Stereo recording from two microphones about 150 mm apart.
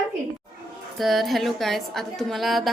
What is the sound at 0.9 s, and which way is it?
A woman's voice, centre (ahead or behind).